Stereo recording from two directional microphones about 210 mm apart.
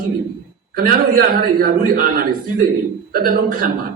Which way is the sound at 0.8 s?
45° right (ahead or behind).